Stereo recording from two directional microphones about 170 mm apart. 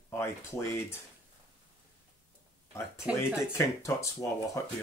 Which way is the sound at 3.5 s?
15° left (ahead or behind).